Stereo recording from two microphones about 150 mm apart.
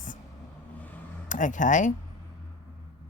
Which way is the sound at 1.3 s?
60° left (ahead or behind).